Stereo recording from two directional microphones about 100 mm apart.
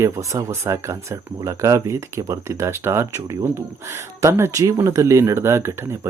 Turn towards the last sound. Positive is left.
turn(degrees=-25)  # may be behind; listen again after turning